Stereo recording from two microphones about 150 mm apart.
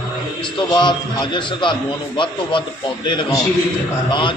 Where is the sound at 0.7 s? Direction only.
30° left (ahead or behind).